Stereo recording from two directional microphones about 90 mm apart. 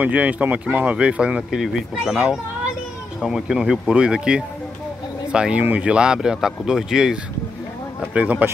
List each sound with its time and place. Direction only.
0.0 s speech: 15° right (ahead or behind)